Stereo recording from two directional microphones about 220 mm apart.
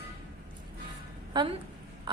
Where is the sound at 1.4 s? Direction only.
20° right (ahead or behind).